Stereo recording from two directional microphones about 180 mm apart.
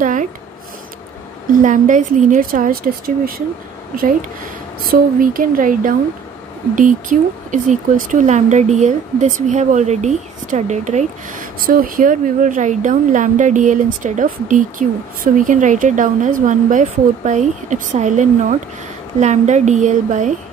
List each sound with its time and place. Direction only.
0.0 s a sound: 45° right (ahead or behind)
1.5 s speech: 45° right (ahead or behind)
4.8 s a woman's voice: 50° right (ahead or behind)